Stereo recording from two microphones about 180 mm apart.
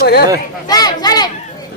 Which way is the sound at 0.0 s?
65° left (ahead or behind).